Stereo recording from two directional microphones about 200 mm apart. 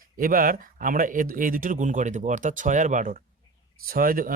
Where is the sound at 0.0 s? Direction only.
45° right (ahead or behind).